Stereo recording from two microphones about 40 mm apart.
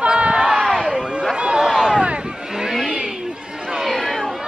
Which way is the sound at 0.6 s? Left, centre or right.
Centre.